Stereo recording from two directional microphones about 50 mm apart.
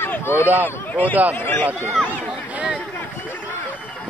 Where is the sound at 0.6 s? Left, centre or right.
Left.